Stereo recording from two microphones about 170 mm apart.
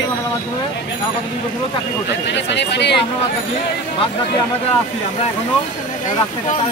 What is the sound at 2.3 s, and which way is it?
Speech, 90° left.